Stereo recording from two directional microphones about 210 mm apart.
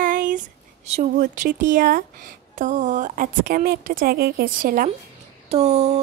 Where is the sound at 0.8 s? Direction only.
30° right (ahead or behind).